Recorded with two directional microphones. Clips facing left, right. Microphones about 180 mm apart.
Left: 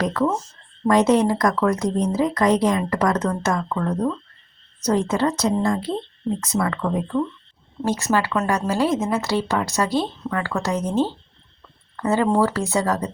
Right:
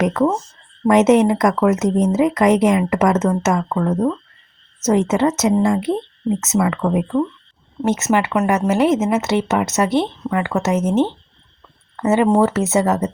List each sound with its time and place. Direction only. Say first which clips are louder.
0.0 s speech: right 4 dB; 20° right (ahead or behind)